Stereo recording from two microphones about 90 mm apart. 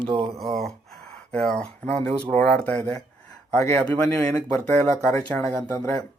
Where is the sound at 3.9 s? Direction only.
20° left (ahead or behind).